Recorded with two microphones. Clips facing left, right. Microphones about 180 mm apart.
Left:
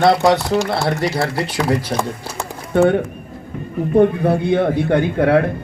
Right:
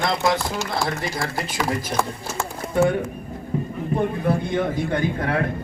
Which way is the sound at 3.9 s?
65° left (ahead or behind).